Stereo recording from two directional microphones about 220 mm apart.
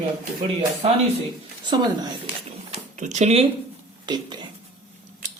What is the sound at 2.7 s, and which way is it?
Speech, 30° right (ahead or behind).